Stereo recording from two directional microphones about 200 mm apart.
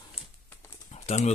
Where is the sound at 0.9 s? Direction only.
30° left (ahead or behind).